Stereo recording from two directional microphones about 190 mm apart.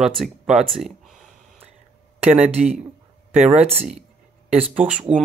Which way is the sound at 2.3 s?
5° right (ahead or behind).